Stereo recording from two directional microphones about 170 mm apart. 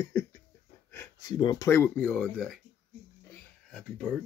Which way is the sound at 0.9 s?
25° left (ahead or behind).